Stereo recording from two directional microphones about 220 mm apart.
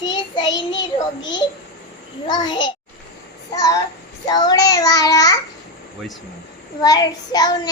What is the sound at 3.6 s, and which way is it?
A child's voice, 15° left (ahead or behind).